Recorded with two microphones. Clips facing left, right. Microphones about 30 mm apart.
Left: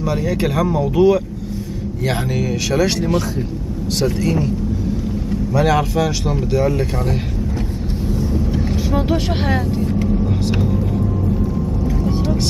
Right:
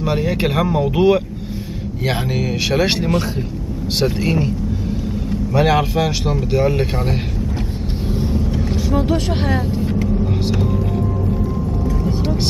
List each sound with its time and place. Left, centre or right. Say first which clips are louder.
0.0 s speech: right 1 dB; right
5.5 s speech: right 1 dB; right
8.1 s vehicle: even; right
8.5 s speech: right 1 dB; centre
10.6 s vehicle: even; centre